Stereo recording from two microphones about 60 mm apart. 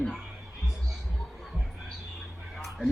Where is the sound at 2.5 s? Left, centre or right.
Centre.